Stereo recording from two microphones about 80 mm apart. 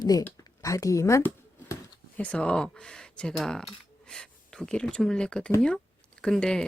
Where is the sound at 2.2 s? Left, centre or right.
Centre.